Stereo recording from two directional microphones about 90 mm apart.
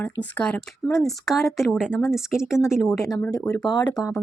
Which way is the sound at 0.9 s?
Centre (ahead or behind).